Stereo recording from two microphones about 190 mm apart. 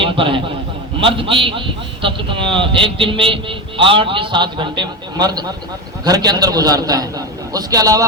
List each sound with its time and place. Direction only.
0.0 s a man's voice: 25° right (ahead or behind)